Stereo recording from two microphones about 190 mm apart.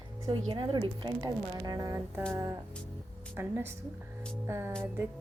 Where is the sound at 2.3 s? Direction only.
15° right (ahead or behind).